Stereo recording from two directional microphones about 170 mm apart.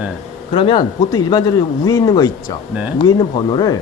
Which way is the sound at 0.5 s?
30° left (ahead or behind).